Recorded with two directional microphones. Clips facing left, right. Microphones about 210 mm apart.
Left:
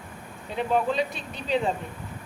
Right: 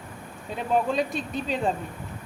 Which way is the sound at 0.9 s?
45° right (ahead or behind).